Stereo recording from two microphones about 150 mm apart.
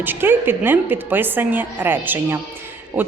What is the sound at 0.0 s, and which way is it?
Speech, 15° right (ahead or behind).